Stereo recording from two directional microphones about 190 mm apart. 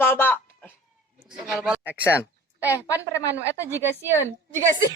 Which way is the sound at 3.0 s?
15° left (ahead or behind).